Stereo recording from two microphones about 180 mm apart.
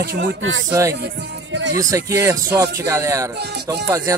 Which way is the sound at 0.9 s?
70° right (ahead or behind).